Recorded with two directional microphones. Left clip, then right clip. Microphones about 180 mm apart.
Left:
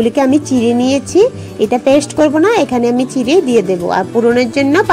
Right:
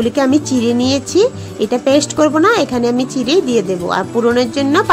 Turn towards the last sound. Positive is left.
turn(degrees=15)  # may be behind; listen again after turning